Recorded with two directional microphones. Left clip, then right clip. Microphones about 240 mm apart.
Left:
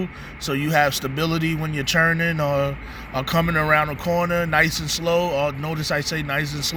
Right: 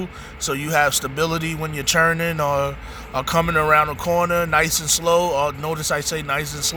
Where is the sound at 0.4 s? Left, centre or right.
Centre.